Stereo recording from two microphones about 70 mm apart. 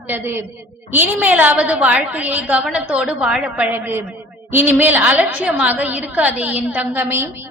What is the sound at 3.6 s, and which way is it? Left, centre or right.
A woman's voice, right.